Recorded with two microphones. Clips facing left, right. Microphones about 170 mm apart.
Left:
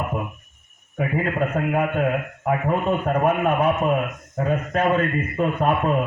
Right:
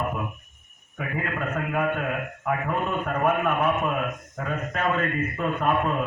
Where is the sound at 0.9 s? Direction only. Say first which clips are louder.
Left 7 dB; 35° left (ahead or behind).